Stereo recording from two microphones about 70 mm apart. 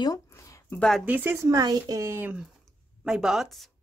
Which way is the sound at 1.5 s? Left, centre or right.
Right.